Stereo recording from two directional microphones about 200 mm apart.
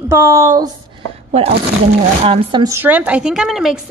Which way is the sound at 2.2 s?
30° right (ahead or behind).